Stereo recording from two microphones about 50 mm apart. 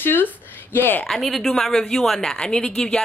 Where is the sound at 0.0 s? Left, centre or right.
Left.